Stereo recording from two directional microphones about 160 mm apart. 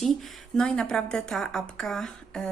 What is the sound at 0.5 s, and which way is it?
A woman's voice, 5° left (ahead or behind).